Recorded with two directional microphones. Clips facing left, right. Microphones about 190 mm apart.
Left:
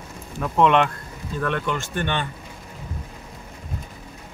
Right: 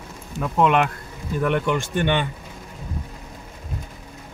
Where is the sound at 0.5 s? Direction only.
5° right (ahead or behind).